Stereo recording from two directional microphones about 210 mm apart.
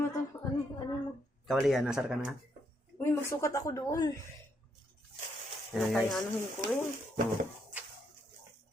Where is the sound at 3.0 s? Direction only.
15° left (ahead or behind).